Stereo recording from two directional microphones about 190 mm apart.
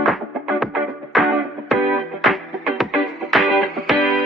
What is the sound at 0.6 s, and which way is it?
Music, centre (ahead or behind).